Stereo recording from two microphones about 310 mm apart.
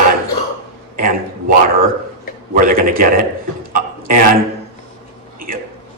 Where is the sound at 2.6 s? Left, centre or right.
Right.